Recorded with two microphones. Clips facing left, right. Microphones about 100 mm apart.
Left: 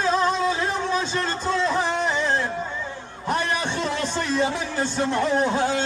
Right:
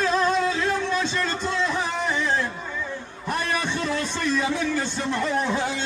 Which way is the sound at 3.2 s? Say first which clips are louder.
Left 2 dB; 30° left (ahead or behind).